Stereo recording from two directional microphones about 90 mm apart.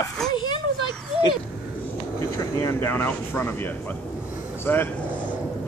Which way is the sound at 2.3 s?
35° left (ahead or behind).